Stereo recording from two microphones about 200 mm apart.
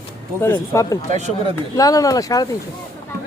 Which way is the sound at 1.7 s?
20° left (ahead or behind).